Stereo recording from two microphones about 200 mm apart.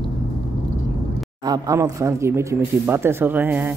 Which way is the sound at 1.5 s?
20° right (ahead or behind).